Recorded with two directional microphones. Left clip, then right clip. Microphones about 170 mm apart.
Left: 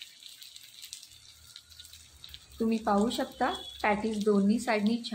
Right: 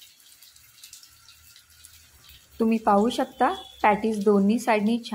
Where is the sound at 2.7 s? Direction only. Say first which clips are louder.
Right 7 dB; 35° right (ahead or behind).